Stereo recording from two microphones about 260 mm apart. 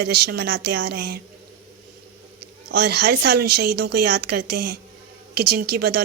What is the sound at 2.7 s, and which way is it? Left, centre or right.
Speech, right.